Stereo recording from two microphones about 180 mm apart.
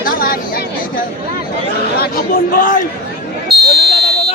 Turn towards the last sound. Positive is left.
turn(degrees=-60)  # may be behind; listen again after turning